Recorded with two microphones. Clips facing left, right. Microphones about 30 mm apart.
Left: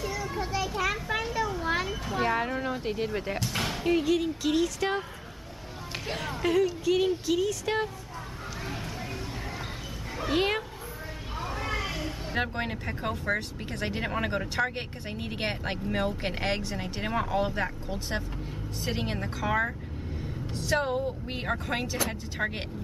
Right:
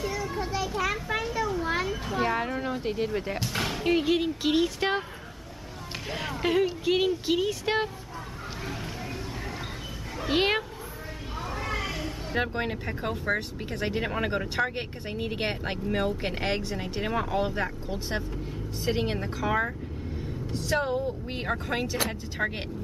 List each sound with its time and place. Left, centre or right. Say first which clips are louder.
0.2 s children playing: right 1 dB; centre
3.4 s speech: right 1 dB; centre
3.8 s speech: right 1 dB; right
6.4 s speech: even; right
10.3 s speech: right 2 dB; right
11.4 s speech: even; centre